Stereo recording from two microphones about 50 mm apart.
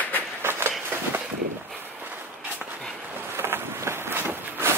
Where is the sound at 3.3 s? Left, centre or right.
Right.